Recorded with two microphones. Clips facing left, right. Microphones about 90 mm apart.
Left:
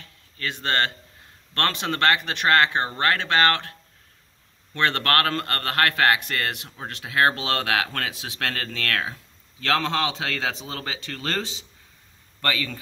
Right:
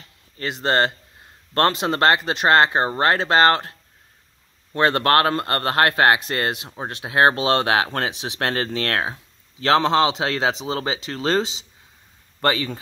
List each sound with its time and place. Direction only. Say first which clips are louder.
0.0 s a sound: right 3 dB; 25° right (ahead or behind)
1.5 s speech: right 6 dB; 25° right (ahead or behind)
4.7 s speech: right 5 dB; 25° right (ahead or behind)